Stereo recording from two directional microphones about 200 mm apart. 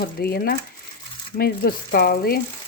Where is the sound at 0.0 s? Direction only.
50° left (ahead or behind).